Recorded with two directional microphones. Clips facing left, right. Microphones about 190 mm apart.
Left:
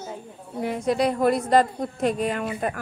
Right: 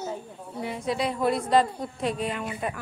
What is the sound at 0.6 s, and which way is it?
A woman's voice, 45° left (ahead or behind).